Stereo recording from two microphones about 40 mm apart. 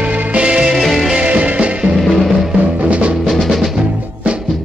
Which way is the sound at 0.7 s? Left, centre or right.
Centre.